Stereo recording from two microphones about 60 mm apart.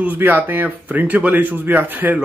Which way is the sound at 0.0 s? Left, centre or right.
Right.